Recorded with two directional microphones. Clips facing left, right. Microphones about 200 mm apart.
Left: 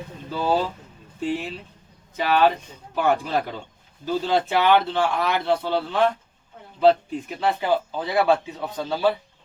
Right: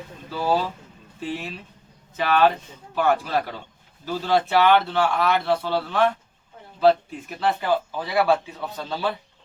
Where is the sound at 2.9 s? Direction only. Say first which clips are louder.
Even; 15° left (ahead or behind).